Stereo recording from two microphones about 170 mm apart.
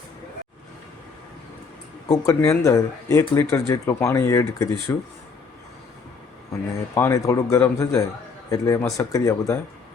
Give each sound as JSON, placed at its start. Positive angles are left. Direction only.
{"t": 2.0, "sound": "speech", "side_deg": 20}
{"t": 6.9, "sound": "speech", "side_deg": 15}